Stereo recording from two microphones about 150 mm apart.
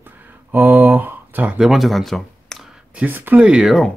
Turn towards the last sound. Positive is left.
turn(degrees=0)  # may be behind; listen again after turning